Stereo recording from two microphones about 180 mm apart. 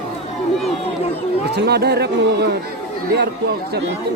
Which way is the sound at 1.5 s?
65° right (ahead or behind).